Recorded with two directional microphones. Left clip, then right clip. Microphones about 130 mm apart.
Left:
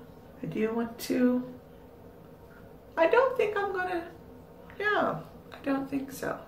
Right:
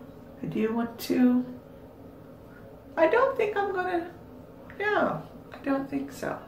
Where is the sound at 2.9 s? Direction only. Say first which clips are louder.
Right 1 dB; centre (ahead or behind).